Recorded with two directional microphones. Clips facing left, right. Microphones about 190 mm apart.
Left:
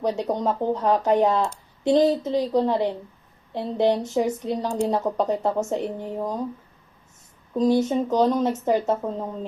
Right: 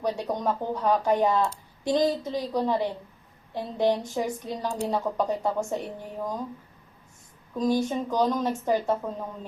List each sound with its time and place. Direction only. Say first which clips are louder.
0.0 s speech: left 4 dB; 20° left (ahead or behind)
7.5 s speech: left 5 dB; 20° left (ahead or behind)